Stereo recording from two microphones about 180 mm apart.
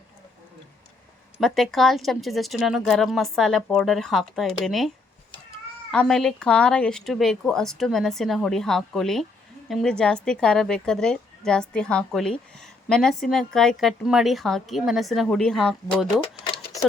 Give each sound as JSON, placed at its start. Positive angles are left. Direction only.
{"t": 1.4, "sound": "a woman's voice", "side_deg": 0}
{"t": 5.9, "sound": "a woman's voice", "side_deg": 5}
{"t": 16.2, "sound": "a sound", "side_deg": 25}